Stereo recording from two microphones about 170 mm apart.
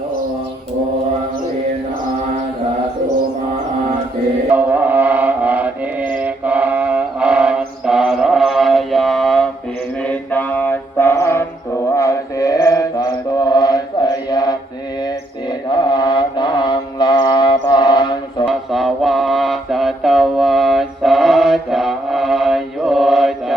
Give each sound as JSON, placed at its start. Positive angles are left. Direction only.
{"t": 4.5, "sound": "chant", "side_deg": -10}
{"t": 10.0, "sound": "mantra", "side_deg": 5}
{"t": 15.7, "sound": "mantra", "side_deg": 25}
{"t": 18.4, "sound": "mantra", "side_deg": 0}